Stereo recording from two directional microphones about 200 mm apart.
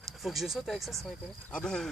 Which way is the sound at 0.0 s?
Centre (ahead or behind).